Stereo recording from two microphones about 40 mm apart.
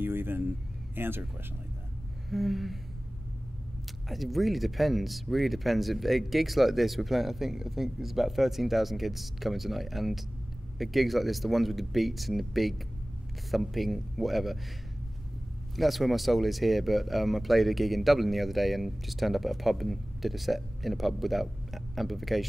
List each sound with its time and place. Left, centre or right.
0.0 s a sound: right
0.9 s speech: right
2.2 s speech: centre
4.1 s speech: centre
15.7 s speech: centre